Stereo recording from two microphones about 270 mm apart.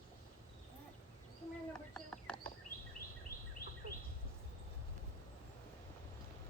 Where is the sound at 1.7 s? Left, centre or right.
Centre.